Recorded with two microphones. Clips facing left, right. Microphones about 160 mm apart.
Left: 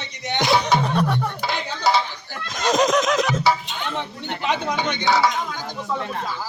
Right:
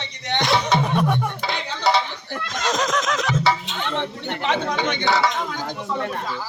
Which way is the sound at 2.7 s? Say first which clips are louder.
Left 5 dB; 15° left (ahead or behind).